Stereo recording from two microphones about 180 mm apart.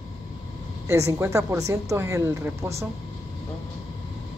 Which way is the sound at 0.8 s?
15° right (ahead or behind).